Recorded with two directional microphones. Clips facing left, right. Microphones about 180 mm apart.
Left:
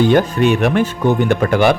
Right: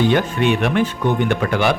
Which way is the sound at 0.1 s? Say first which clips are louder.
Left 4 dB; 40° left (ahead or behind).